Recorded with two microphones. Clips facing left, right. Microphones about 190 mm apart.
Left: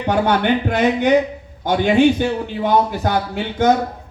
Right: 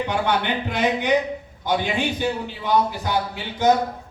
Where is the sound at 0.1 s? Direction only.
45° left (ahead or behind).